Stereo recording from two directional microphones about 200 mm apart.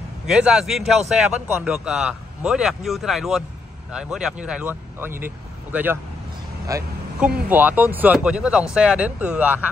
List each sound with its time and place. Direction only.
0.3 s a man's voice: 5° right (ahead or behind)